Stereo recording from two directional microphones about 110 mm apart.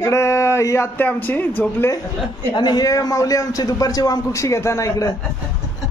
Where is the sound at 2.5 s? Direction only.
40° left (ahead or behind).